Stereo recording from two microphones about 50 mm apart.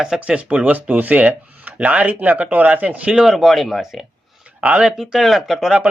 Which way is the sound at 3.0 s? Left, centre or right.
Right.